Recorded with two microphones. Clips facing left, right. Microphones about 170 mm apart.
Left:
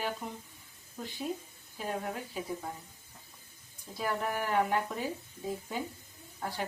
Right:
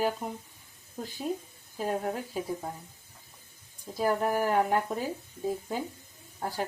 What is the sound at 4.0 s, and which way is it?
Speech, 40° right (ahead or behind).